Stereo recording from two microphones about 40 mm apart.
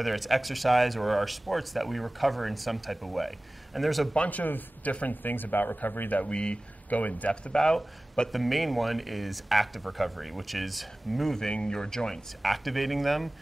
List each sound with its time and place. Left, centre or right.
0.0 s speech: centre
4.5 s speech: left
6.2 s speech: left
6.9 s speech: left
7.5 s speech: centre
8.3 s speech: centre
11.5 s speech: centre
12.4 s speech: centre